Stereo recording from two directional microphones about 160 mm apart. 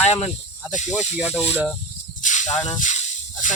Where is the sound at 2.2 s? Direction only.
50° left (ahead or behind).